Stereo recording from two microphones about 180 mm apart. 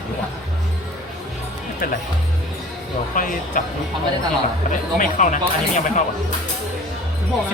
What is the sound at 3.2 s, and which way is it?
Speech, 50° left (ahead or behind).